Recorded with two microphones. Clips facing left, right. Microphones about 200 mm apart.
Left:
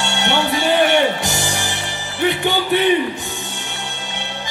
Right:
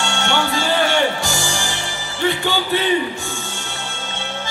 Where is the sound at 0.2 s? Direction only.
20° left (ahead or behind).